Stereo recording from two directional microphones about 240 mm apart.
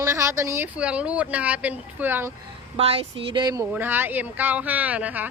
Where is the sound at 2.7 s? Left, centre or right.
Right.